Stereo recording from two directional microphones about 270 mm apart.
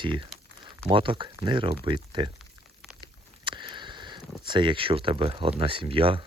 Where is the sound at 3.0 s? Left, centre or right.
Centre.